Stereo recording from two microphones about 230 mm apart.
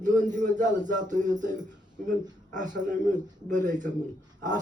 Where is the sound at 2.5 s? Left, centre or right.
Right.